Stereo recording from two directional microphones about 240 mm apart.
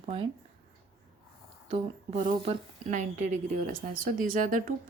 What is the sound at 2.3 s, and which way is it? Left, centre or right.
Speech, right.